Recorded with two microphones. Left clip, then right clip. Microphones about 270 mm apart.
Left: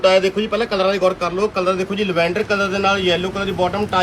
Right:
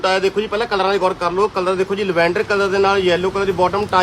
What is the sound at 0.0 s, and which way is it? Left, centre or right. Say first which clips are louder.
Speech: left 2 dB; centre.